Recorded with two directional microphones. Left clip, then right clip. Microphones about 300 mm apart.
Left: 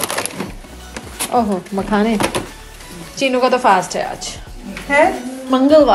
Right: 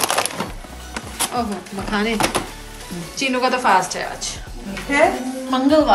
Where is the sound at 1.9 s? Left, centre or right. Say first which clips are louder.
Left 4 dB; centre.